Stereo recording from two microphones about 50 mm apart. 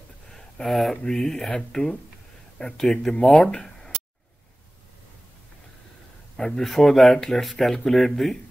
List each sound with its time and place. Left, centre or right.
0.3 s a sound: centre
1.0 s speech: centre
6.3 s speech: centre